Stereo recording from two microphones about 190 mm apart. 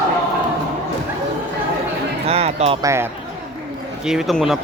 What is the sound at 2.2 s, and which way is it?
Music, 35° right (ahead or behind).